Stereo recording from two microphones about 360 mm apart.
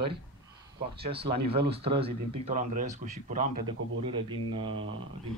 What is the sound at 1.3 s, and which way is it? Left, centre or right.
Speech, centre.